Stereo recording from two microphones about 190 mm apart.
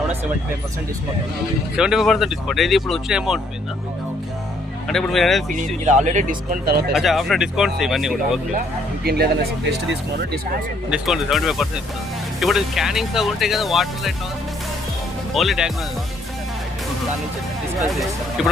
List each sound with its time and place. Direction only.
1.7 s speech: 5° right (ahead or behind)
4.9 s speech: centre (ahead or behind)
5.5 s speech: 40° right (ahead or behind)
6.9 s speech: centre (ahead or behind)
9.0 s speech: 55° right (ahead or behind)
10.9 s speech: centre (ahead or behind)
15.4 s speech: centre (ahead or behind)
17.7 s speech: centre (ahead or behind)